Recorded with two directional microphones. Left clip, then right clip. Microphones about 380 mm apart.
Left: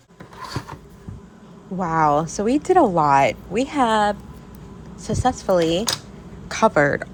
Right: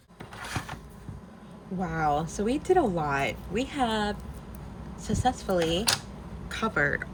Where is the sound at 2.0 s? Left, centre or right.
Centre.